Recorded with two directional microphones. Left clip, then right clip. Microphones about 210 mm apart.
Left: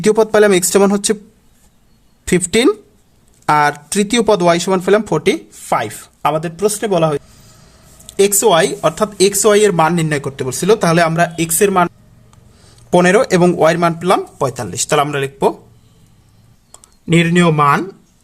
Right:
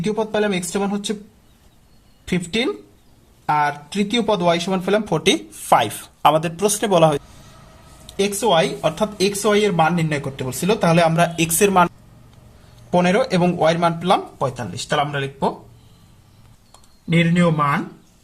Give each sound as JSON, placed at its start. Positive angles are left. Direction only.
{"t": 0.0, "sound": "speech", "side_deg": 40}
{"t": 2.2, "sound": "speech", "side_deg": 35}
{"t": 8.0, "sound": "speech", "side_deg": 35}
{"t": 12.9, "sound": "speech", "side_deg": 35}
{"t": 16.7, "sound": "a sound", "side_deg": 45}